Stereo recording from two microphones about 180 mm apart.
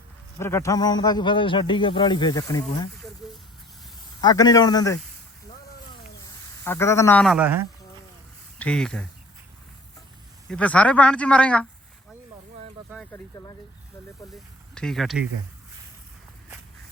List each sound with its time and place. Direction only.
0.3 s speech: 15° left (ahead or behind)
4.2 s speech: 20° left (ahead or behind)
5.9 s a sound: 25° left (ahead or behind)
7.3 s speech: 10° right (ahead or behind)
8.5 s speech: 5° left (ahead or behind)
10.5 s speech: 5° left (ahead or behind)
13.1 s speech: 20° left (ahead or behind)
14.8 s speech: centre (ahead or behind)